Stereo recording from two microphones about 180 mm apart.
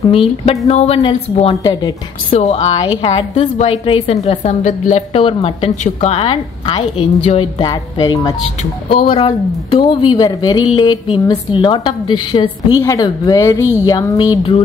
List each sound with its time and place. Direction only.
0.1 s a woman's voice: 35° left (ahead or behind)
7.6 s a woman's voice: 20° left (ahead or behind)